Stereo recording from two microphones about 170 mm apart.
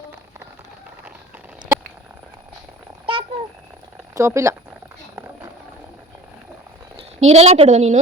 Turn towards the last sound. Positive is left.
turn(degrees=-45)  # may be behind; listen again after turning